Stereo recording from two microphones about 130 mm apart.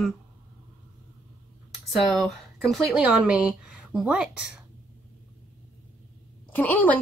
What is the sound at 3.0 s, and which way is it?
A woman's voice, 10° right (ahead or behind).